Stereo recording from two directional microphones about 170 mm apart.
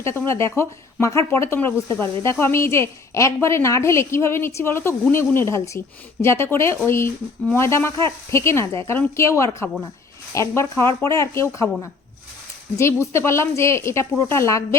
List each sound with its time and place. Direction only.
0.0 s speech: 15° left (ahead or behind)